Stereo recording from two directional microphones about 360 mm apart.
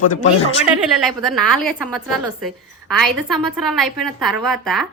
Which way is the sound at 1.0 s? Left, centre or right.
Centre.